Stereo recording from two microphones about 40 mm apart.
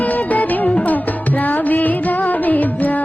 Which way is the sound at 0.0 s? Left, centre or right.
Left.